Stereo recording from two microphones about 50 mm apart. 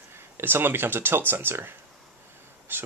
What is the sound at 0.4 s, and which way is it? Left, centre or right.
Speech, right.